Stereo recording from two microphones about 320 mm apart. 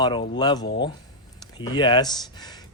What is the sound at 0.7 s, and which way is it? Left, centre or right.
Speech, left.